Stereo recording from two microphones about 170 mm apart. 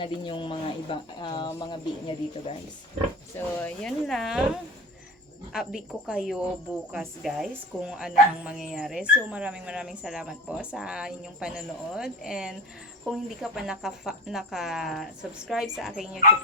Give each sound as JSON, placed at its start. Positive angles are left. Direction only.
{"t": 0.0, "sound": "speech", "side_deg": 30}
{"t": 3.3, "sound": "speech", "side_deg": 5}
{"t": 5.5, "sound": "speech", "side_deg": -5}